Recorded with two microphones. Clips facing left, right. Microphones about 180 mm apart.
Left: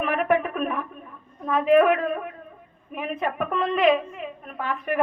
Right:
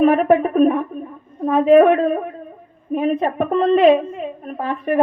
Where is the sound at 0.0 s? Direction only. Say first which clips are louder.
Right 9 dB; 35° right (ahead or behind).